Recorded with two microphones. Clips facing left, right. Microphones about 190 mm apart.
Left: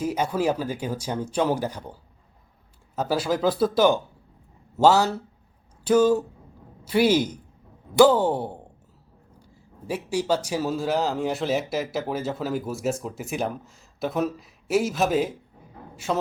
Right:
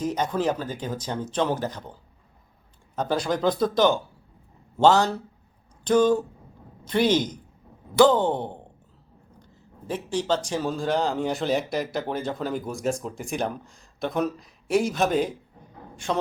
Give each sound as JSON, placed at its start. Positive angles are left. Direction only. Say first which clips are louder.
{"t": 0.0, "sound": "speech", "louder": "left 1 dB", "side_deg": 10}